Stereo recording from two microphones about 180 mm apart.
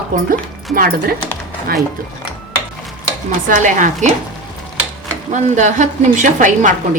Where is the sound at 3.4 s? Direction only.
45° right (ahead or behind).